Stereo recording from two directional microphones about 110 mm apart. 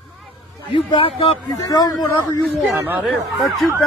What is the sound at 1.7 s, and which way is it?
Speech, 35° left (ahead or behind).